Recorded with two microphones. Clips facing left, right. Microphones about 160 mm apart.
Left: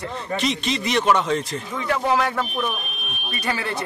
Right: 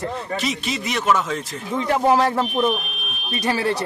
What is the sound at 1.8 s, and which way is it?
Speech, 35° right (ahead or behind).